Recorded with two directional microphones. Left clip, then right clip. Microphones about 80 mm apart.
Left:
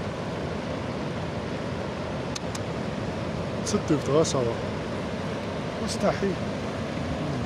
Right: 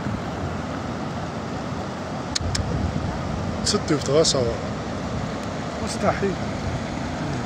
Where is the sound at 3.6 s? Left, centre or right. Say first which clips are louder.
Right 4 dB; centre.